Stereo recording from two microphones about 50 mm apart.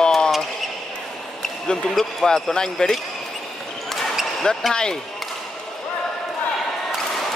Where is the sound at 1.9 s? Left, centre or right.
Centre.